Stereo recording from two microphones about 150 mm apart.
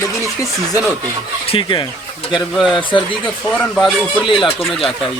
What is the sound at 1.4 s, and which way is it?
Speech, 35° left (ahead or behind).